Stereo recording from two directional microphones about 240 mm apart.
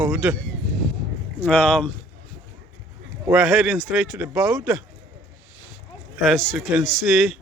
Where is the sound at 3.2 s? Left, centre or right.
Centre.